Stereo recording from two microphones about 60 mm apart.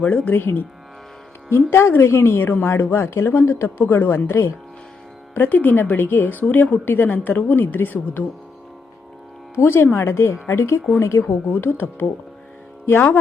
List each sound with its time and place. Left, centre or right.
0.0 s speech: left
0.3 s a woman's voice: left
1.7 s a woman's voice: left
9.6 s speech: left
11.5 s a woman's voice: left